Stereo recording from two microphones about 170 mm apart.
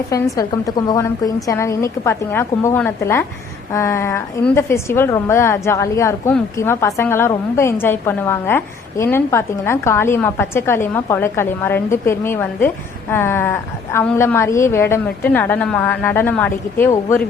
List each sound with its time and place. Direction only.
0.1 s a woman's voice: 20° left (ahead or behind)